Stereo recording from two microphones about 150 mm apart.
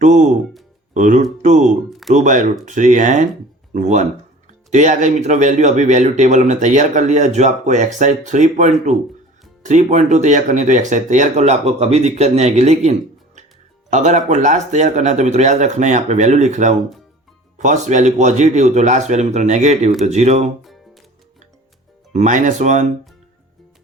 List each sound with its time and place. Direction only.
0.0 s speech: 55° right (ahead or behind)
1.9 s a sound: centre (ahead or behind)
2.1 s speech: 55° right (ahead or behind)
20.6 s music: centre (ahead or behind)
22.1 s speech: 55° right (ahead or behind)